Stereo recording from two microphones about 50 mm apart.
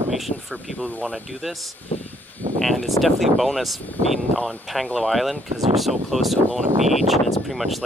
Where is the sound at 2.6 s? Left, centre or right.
Centre.